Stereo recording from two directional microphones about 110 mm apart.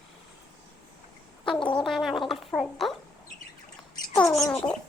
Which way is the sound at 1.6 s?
50° left (ahead or behind).